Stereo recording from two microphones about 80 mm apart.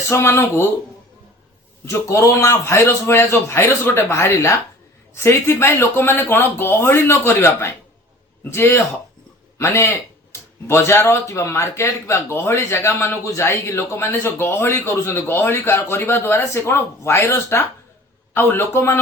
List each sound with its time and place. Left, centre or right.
0.1 s speech: left
1.8 s speech: left